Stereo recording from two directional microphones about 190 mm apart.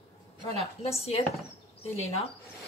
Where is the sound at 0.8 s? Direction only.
30° left (ahead or behind).